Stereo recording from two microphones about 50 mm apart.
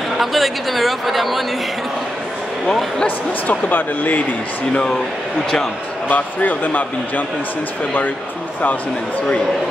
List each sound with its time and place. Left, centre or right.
0.2 s speech: centre
3.4 s speech: left
6.0 s speech: left